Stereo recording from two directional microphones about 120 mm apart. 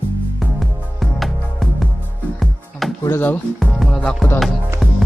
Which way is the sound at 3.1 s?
15° left (ahead or behind).